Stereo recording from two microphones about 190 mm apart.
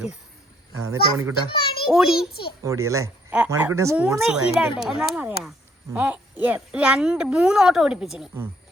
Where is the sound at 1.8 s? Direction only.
5° right (ahead or behind).